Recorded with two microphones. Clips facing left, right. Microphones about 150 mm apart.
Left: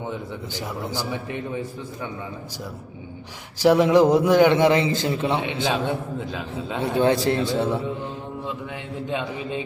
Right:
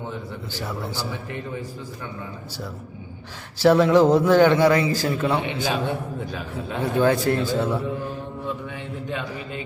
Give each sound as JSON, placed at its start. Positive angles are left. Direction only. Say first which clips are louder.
{"t": 0.5, "sound": "a man's voice", "louder": "left 1 dB", "side_deg": 15}
{"t": 3.6, "sound": "a man's voice", "louder": "even", "side_deg": 15}